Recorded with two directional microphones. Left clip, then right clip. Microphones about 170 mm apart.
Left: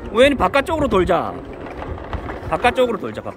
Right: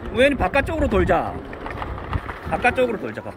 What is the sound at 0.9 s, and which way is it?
Speech, centre (ahead or behind).